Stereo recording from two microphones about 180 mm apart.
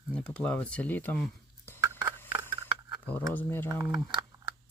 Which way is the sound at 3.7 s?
20° right (ahead or behind).